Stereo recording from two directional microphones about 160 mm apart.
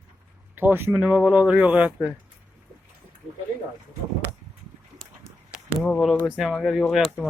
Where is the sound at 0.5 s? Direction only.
15° right (ahead or behind).